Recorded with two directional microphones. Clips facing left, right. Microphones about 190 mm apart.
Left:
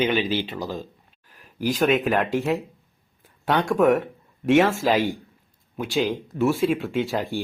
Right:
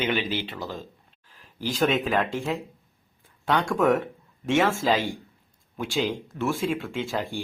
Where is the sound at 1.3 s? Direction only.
10° left (ahead or behind).